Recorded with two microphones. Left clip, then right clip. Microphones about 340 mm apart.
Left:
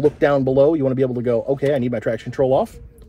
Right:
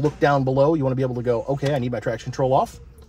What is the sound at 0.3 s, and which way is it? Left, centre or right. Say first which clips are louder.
Speech: left 3 dB; left.